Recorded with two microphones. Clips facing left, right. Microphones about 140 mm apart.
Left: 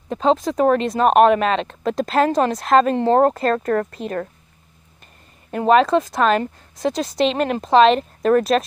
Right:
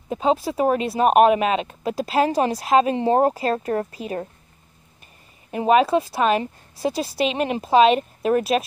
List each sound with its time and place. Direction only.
0.1 s a woman's voice: 10° right (ahead or behind)
3.3 s speech: 55° left (ahead or behind)
3.9 s a woman's voice: 5° right (ahead or behind)
5.5 s a woman's voice: 10° right (ahead or behind)